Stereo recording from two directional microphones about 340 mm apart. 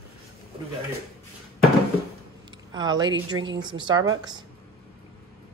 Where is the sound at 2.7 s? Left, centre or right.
Centre.